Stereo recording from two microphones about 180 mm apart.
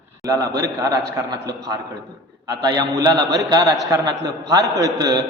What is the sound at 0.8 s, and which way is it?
Speech, 20° right (ahead or behind).